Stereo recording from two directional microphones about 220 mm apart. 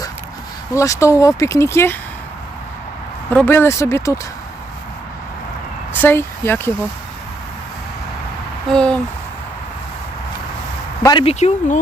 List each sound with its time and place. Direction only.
0.7 s speech: 15° left (ahead or behind)
3.2 s speech: 10° left (ahead or behind)
6.0 s speech: 10° left (ahead or behind)
8.7 s speech: 5° left (ahead or behind)
11.0 s speech: 20° left (ahead or behind)